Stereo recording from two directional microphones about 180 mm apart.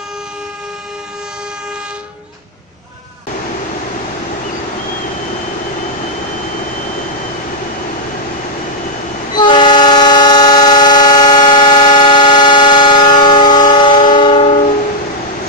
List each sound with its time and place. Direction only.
9.3 s train: 25° left (ahead or behind)